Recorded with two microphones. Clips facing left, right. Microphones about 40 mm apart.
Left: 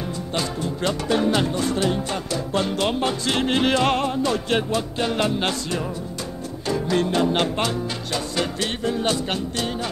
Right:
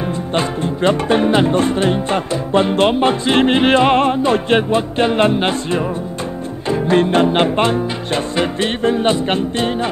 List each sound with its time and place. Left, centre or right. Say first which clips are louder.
0.3 s music: right 7 dB; right